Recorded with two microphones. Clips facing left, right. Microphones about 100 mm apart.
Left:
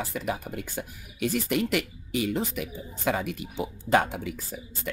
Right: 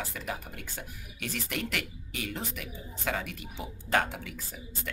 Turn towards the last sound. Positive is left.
turn(degrees=20)  # may be behind; listen again after turning